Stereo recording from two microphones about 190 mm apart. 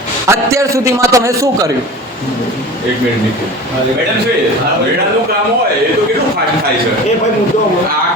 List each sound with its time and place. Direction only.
0.3 s a man's voice: 15° right (ahead or behind)